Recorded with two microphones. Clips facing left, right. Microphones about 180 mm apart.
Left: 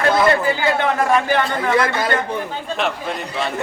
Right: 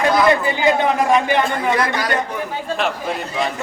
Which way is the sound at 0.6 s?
15° right (ahead or behind).